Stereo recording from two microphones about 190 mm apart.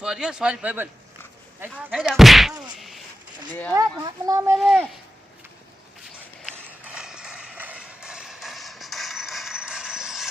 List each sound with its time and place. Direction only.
0.0 s speech: 5° right (ahead or behind)
2.0 s speech: 5° right (ahead or behind)
2.7 s a sound: centre (ahead or behind)
3.7 s speech: 20° right (ahead or behind)
4.5 s speech: centre (ahead or behind)
6.6 s clip-clop: 5° right (ahead or behind)